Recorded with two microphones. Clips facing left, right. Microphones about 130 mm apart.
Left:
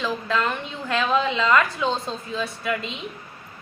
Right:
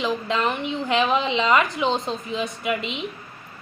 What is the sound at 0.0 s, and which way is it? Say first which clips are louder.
A woman's voice: right 1 dB; 20° right (ahead or behind).